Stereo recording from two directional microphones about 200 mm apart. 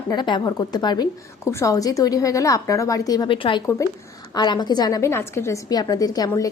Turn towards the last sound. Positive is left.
turn(degrees=20)  # may be behind; listen again after turning